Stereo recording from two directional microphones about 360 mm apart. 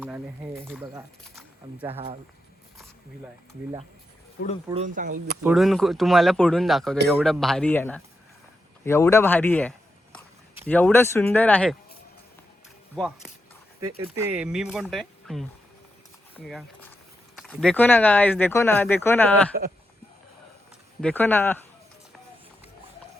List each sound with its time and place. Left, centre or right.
0.0 s speech: centre
1.9 s speech: centre
4.7 s speech: centre
5.4 s a man's voice: centre
13.0 s speech: centre
13.8 s speech: centre
14.3 s speech: centre
16.3 s a sound: centre
17.3 s speech: centre
21.0 s speech: centre